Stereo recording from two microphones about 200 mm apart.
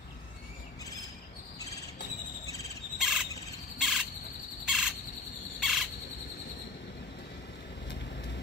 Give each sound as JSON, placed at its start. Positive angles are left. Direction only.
{"t": 2.4, "sound": "cricket", "side_deg": 15}
{"t": 3.0, "sound": "bird", "side_deg": -5}
{"t": 3.7, "sound": "cricket", "side_deg": 0}
{"t": 4.6, "sound": "bird", "side_deg": -5}
{"t": 5.6, "sound": "cricket", "side_deg": 0}